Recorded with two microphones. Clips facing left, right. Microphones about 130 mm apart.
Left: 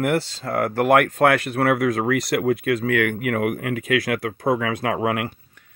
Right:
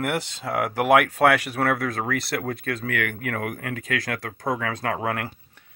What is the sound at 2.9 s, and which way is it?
Speech, 20° left (ahead or behind).